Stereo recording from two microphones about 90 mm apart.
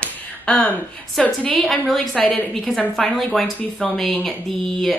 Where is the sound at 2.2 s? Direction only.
15° left (ahead or behind).